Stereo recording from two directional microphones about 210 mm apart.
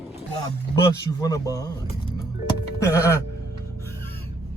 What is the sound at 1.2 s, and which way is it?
Speech, 15° left (ahead or behind).